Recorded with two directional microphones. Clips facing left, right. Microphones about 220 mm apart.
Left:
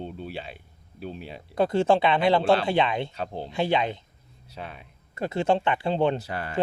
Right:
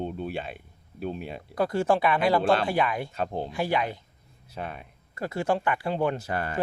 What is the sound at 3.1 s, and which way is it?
Speech, 50° right (ahead or behind).